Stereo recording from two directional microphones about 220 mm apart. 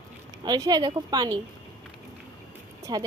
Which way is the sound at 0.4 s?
20° right (ahead or behind).